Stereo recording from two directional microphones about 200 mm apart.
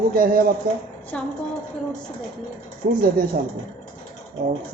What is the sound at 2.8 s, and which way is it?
Speech, 45° right (ahead or behind).